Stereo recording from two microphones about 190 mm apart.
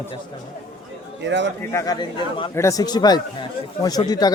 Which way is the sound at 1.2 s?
70° right (ahead or behind).